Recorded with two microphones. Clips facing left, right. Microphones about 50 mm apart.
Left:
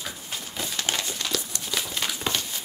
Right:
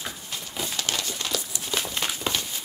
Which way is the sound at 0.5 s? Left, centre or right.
Centre.